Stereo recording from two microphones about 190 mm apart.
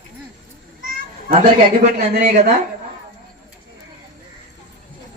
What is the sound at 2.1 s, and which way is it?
Speech, 45° right (ahead or behind).